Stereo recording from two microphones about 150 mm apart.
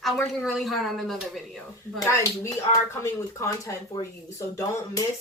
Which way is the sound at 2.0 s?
20° left (ahead or behind).